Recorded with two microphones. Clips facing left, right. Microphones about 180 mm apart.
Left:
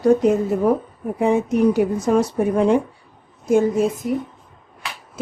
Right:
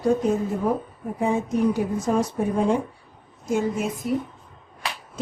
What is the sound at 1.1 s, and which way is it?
Speech, 70° left (ahead or behind).